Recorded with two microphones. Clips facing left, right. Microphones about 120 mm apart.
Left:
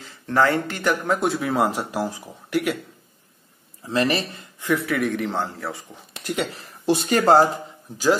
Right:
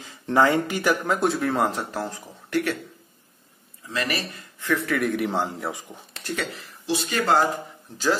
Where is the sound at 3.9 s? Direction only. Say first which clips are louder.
Left 6 dB; 30° left (ahead or behind).